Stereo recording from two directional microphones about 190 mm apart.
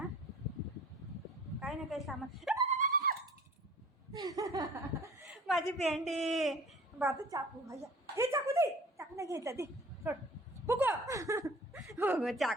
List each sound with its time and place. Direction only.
1.5 s a sound: centre (ahead or behind)
2.0 s speech: centre (ahead or behind)
2.6 s a sound: 40° right (ahead or behind)
4.1 s laughter: 20° right (ahead or behind)
5.5 s speech: centre (ahead or behind)
7.0 s a woman's voice: 15° right (ahead or behind)
8.1 s a sound: 15° right (ahead or behind)
10.7 s speech: 15° right (ahead or behind)
12.2 s speech: centre (ahead or behind)